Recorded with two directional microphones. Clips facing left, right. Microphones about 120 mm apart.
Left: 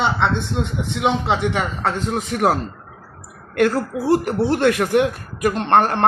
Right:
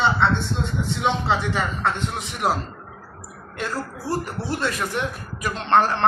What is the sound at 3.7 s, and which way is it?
A woman's voice, 60° left (ahead or behind).